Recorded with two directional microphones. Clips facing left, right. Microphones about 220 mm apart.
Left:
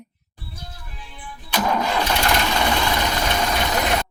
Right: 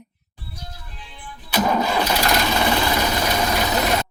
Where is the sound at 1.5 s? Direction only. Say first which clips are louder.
Right 2 dB; 10° right (ahead or behind).